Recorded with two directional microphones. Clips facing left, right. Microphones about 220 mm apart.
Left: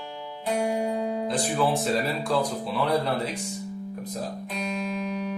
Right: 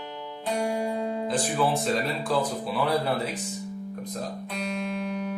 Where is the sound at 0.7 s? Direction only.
20° left (ahead or behind).